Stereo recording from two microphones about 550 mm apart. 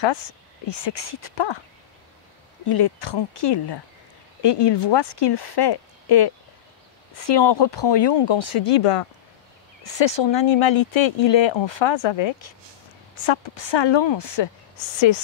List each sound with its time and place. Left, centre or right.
0.0 s speech: left
0.8 s speech: left
2.6 s speech: left
3.5 s speech: left
8.4 s speech: left
9.8 s speech: left